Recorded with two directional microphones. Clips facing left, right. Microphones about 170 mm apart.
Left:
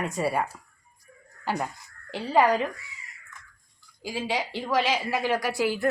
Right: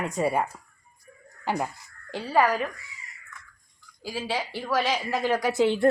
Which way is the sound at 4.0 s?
15° left (ahead or behind).